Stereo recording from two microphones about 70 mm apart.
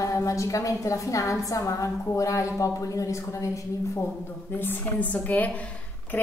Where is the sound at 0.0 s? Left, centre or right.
Left.